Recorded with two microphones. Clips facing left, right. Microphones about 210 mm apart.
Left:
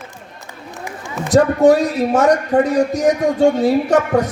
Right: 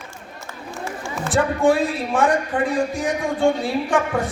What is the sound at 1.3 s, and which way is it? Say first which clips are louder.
A man's voice: left 7 dB; 40° left (ahead or behind).